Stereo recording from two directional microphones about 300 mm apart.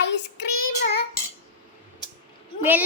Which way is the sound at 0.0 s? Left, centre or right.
Left.